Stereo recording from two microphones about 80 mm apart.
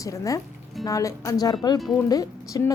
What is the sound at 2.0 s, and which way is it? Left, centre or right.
Speech, left.